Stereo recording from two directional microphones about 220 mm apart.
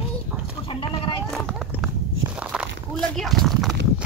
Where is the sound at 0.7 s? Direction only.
25° left (ahead or behind).